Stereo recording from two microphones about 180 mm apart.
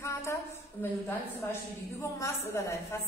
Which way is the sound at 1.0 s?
15° left (ahead or behind).